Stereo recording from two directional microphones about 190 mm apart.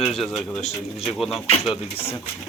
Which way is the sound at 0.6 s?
35° left (ahead or behind).